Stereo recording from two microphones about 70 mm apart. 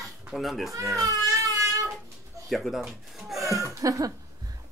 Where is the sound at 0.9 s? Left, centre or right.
Right.